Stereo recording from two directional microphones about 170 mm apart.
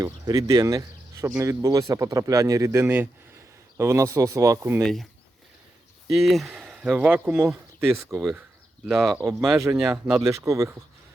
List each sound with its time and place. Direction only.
0.0 s speech: 20° right (ahead or behind)
4.8 s speech: centre (ahead or behind)
6.1 s speech: centre (ahead or behind)
9.4 s speech: 20° right (ahead or behind)